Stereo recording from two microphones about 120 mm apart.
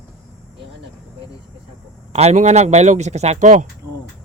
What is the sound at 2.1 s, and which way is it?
Speech, 70° right (ahead or behind).